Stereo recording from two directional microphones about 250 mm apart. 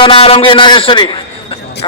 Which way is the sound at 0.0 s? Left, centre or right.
Left.